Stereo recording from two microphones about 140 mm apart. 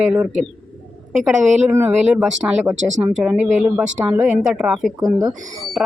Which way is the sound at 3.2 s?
10° right (ahead or behind).